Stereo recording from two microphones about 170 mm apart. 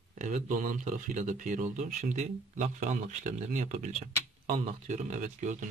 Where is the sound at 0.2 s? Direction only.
45° right (ahead or behind).